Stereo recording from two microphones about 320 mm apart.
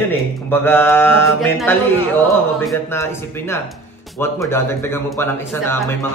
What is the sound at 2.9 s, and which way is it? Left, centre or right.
Speech, centre.